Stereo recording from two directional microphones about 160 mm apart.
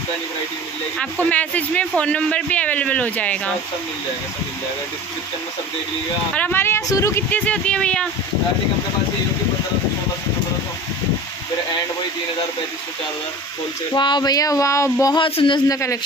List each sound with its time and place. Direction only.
0.9 s speech: 10° left (ahead or behind)
6.3 s speech: 10° left (ahead or behind)
13.9 s speech: 30° left (ahead or behind)
15.2 s a man's voice: 30° left (ahead or behind)